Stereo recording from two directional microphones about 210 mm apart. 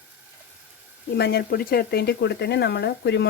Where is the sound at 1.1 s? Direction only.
50° left (ahead or behind).